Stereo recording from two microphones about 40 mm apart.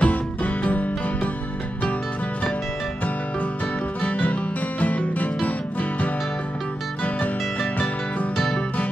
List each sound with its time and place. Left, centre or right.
0.0 s music: left
4.0 s music: left
7.8 s music: left